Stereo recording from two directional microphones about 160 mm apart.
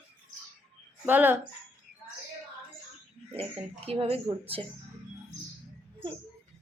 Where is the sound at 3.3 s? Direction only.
40° right (ahead or behind).